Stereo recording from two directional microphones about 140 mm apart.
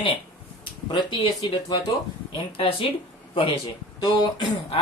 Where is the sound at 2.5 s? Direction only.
40° left (ahead or behind).